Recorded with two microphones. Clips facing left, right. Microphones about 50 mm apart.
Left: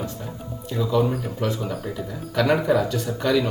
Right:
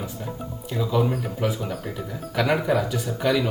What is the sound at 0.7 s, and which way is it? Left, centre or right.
Speech, centre.